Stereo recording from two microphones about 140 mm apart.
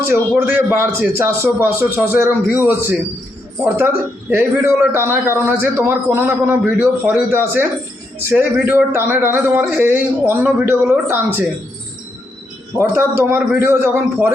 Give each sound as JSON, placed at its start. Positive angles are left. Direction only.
{"t": 0.1, "sound": "a man's voice", "side_deg": -15}
{"t": 12.7, "sound": "a man's voice", "side_deg": -15}